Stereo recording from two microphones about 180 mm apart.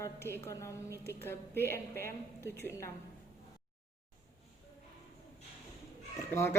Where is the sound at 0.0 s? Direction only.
15° left (ahead or behind).